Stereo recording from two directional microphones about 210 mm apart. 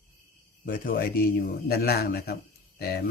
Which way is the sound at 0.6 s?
45° left (ahead or behind).